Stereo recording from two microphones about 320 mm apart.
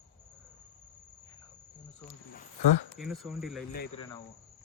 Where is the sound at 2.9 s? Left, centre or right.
Centre.